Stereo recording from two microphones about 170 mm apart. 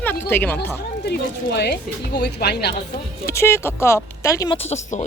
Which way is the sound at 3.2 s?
15° left (ahead or behind).